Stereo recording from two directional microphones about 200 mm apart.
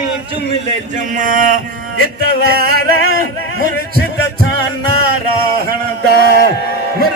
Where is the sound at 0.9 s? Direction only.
40° right (ahead or behind).